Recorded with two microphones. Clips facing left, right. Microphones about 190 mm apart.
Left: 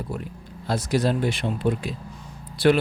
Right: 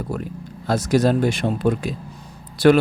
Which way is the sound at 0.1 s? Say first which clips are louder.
Right 5 dB; 45° right (ahead or behind).